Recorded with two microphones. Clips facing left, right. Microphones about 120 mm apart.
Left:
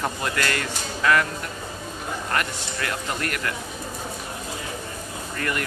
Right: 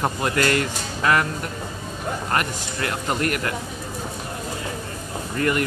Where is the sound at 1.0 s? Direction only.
30° right (ahead or behind).